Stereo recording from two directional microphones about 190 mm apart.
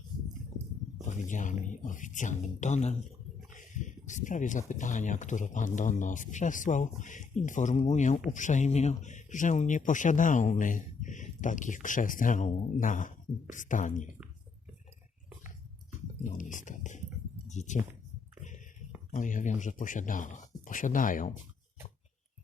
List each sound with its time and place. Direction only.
1.0 s speech: 40° left (ahead or behind)
16.2 s speech: 45° left (ahead or behind)
19.1 s speech: 40° left (ahead or behind)